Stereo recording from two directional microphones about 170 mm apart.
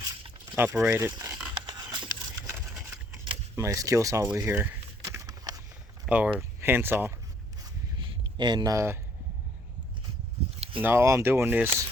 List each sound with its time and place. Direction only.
0.5 s speech: 10° right (ahead or behind)
1.6 s a sound: 25° right (ahead or behind)
3.5 s speech: 15° right (ahead or behind)
4.4 s a sound: 15° right (ahead or behind)
6.1 s speech: 5° right (ahead or behind)
8.4 s speech: 25° right (ahead or behind)
10.8 s speech: 15° right (ahead or behind)